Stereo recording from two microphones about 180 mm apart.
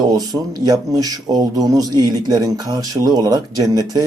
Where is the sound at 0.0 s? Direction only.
20° right (ahead or behind).